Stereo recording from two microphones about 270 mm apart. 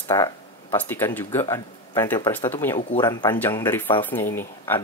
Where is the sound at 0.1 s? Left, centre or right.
Centre.